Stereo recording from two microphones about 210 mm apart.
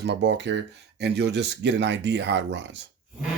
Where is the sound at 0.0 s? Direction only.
55° right (ahead or behind).